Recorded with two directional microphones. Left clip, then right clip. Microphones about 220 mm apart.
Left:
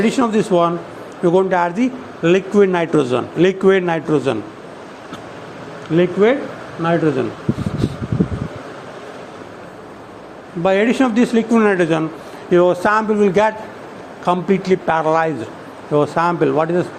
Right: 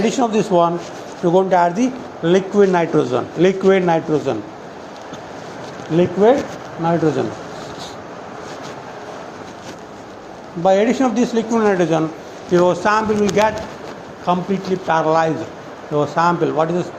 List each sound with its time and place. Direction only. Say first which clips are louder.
0.0 s a man's voice: left 1 dB; 40° left (ahead or behind)
6.8 s speech: left 1 dB; 30° left (ahead or behind)
10.6 s a man's voice: even; 40° left (ahead or behind)